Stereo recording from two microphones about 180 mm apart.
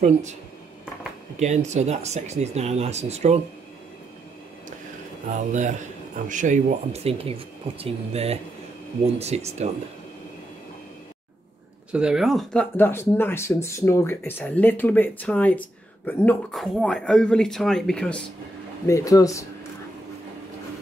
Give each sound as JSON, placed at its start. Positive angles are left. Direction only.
{"t": 0.0, "sound": "speech", "side_deg": -40}
{"t": 1.4, "sound": "speech", "side_deg": -40}
{"t": 5.5, "sound": "a man's voice", "side_deg": -40}
{"t": 11.9, "sound": "speech", "side_deg": -5}
{"t": 12.7, "sound": "speech", "side_deg": 10}
{"t": 18.9, "sound": "speech", "side_deg": 20}